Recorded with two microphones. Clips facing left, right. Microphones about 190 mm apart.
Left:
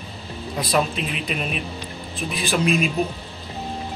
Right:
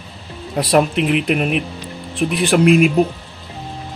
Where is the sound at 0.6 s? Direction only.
70° right (ahead or behind).